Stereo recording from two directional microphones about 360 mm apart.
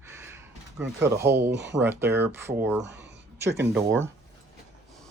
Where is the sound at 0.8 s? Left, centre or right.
Centre.